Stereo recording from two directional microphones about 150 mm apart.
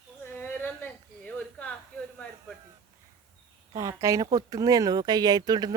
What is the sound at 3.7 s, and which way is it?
Speech, 25° right (ahead or behind).